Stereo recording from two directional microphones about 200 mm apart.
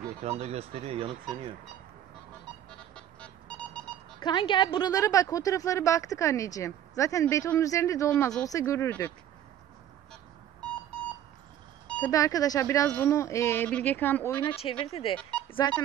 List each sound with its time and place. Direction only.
0.2 s speech: 30° right (ahead or behind)
3.2 s music: 5° left (ahead or behind)
4.2 s a woman's voice: 25° left (ahead or behind)
12.1 s a woman's voice: 15° left (ahead or behind)
14.4 s speech: 30° left (ahead or behind)